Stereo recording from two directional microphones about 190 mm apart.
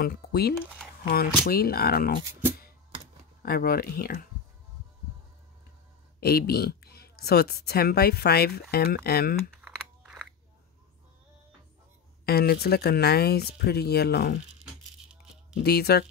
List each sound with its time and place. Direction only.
0.0 s speech: 55° left (ahead or behind)
3.4 s speech: 50° left (ahead or behind)
6.2 s speech: 55° left (ahead or behind)
9.6 s crumpling: 5° right (ahead or behind)
12.3 s speech: 55° left (ahead or behind)
15.6 s speech: 55° left (ahead or behind)